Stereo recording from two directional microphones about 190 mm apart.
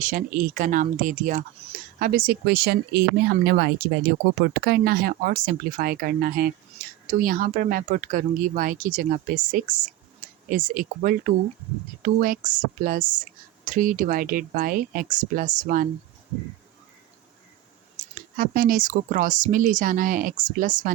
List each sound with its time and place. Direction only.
0.0 s speech: 45° right (ahead or behind)
18.1 s speech: 50° right (ahead or behind)